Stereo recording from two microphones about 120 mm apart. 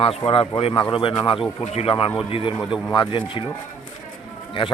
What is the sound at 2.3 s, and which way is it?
A man's voice, 45° left (ahead or behind).